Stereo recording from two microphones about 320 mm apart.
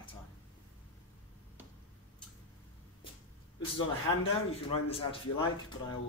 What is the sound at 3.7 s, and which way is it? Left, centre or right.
Speech, centre.